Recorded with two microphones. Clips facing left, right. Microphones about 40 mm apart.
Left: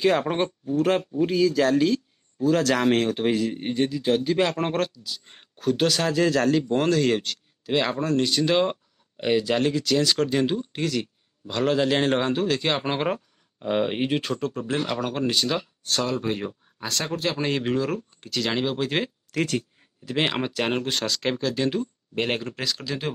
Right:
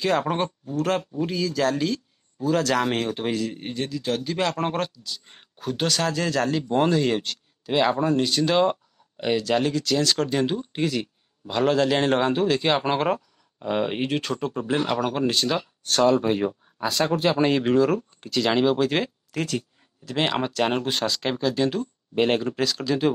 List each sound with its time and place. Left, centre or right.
0.0 s speech: centre
8.3 s speech: centre
10.7 s speech: centre
11.7 s speech: centre
14.5 s speech: centre
19.3 s speech: left
20.1 s speech: centre